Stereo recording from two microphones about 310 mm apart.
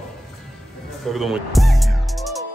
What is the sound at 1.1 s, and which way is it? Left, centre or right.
Music, centre.